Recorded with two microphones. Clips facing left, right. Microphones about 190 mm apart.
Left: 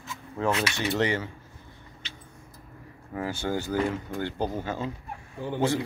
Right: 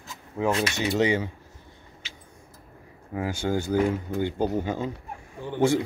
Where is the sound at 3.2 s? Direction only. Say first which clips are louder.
Right 3 dB; 15° right (ahead or behind).